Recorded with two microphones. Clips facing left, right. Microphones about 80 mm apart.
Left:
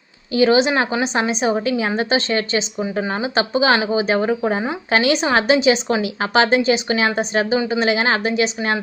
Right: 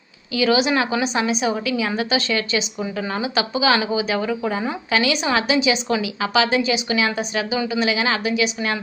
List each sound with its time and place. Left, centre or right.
0.3 s a woman's voice: left